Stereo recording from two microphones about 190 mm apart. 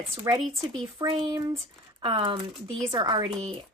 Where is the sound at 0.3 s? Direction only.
15° right (ahead or behind).